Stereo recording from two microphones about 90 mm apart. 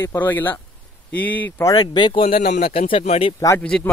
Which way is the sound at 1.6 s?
45° left (ahead or behind).